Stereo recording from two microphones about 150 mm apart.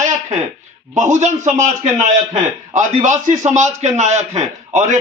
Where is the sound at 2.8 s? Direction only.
55° right (ahead or behind).